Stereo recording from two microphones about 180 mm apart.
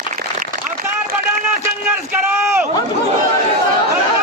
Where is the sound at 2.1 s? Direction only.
15° right (ahead or behind).